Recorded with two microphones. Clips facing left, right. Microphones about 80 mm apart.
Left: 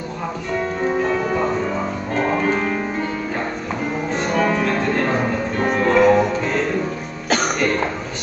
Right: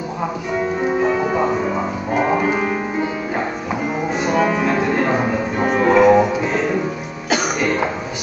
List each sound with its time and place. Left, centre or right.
0.5 s music: centre